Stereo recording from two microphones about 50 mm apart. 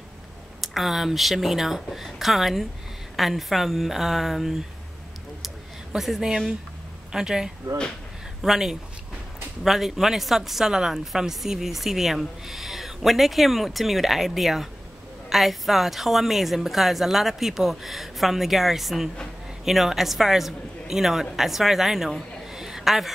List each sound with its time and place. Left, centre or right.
0.6 s a woman's voice: centre
5.9 s a woman's voice: centre
22.5 s a sound: centre